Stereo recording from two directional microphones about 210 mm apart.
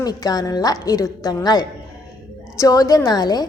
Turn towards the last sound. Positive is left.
turn(degrees=20)  # may be behind; listen again after turning